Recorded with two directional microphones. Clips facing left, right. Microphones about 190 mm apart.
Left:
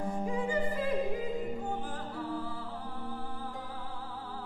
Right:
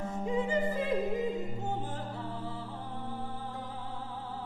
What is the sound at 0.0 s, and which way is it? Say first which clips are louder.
Music: right 1 dB; 25° right (ahead or behind).